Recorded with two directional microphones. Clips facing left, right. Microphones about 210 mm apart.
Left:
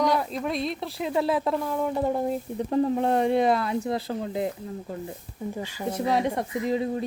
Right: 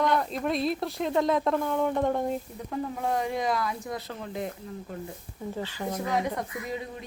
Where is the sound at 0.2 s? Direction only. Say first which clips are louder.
Even; centre (ahead or behind).